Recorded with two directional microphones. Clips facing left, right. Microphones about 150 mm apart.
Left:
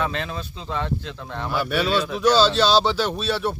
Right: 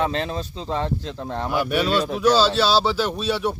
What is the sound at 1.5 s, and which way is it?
A man's voice, 15° right (ahead or behind).